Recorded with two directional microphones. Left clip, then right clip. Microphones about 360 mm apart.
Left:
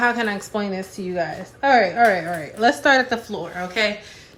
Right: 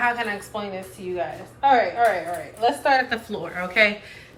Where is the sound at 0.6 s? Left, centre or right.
Left.